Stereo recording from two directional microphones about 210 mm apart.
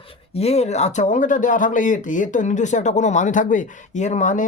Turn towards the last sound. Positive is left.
turn(degrees=35)  # may be behind; listen again after turning